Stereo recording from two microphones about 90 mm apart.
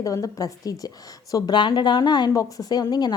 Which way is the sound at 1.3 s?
55° left (ahead or behind).